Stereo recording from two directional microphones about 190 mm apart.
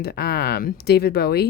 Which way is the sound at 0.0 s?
55° left (ahead or behind).